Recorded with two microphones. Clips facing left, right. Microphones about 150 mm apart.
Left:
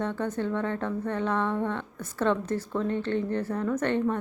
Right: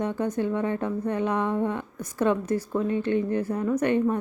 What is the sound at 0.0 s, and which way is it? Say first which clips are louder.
A woman's voice: right 3 dB; 15° right (ahead or behind).